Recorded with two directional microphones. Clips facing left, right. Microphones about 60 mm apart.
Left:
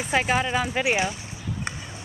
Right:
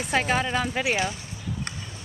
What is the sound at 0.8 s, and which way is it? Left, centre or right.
Speech, centre.